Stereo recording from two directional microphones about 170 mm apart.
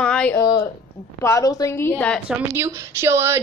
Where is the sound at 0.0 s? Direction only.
5° left (ahead or behind).